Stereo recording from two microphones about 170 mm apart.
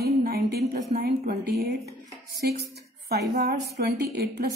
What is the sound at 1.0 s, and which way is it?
Speech, 65° right (ahead or behind).